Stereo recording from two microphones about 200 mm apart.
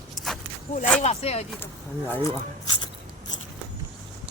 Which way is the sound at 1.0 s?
30° left (ahead or behind).